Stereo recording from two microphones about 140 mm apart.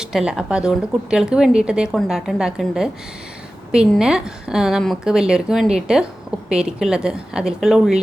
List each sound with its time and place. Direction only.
0.0 s a woman's voice: 5° right (ahead or behind)